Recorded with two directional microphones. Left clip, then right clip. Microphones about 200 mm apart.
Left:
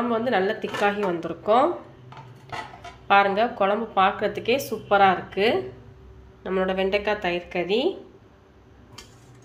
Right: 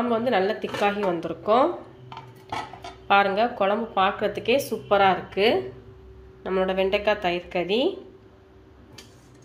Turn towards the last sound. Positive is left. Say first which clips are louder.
# even
turn(degrees=-5)  # may be behind; listen again after turning